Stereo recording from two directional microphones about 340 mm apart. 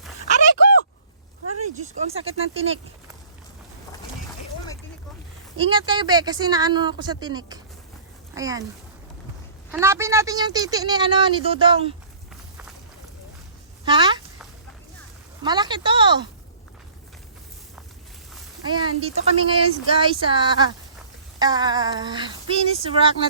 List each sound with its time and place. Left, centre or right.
1.7 s speech: centre
5.5 s speech: centre
9.7 s speech: centre
13.8 s a sound: centre
15.4 s a sound: centre
18.6 s speech: centre